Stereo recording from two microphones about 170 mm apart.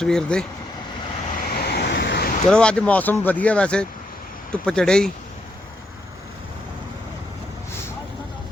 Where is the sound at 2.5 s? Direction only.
5° left (ahead or behind).